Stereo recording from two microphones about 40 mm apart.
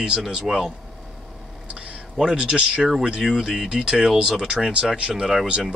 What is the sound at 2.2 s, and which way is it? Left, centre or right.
Speech, right.